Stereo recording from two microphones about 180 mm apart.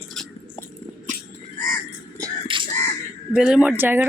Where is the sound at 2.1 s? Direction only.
25° right (ahead or behind).